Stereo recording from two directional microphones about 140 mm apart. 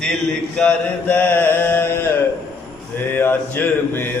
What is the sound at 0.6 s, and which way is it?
Mantra, 10° left (ahead or behind).